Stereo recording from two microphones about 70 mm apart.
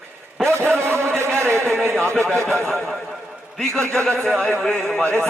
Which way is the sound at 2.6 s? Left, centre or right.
Centre.